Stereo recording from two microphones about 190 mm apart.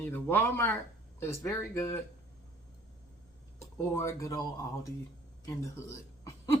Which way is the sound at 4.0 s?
15° left (ahead or behind).